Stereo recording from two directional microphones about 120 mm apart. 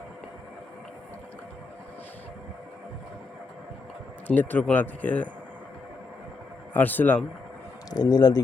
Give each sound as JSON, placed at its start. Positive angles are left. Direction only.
{"t": 4.3, "sound": "a man's voice", "side_deg": 15}
{"t": 6.7, "sound": "a man's voice", "side_deg": 15}
{"t": 7.9, "sound": "speech", "side_deg": 35}